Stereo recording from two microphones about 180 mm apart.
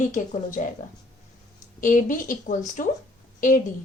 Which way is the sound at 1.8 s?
45° left (ahead or behind).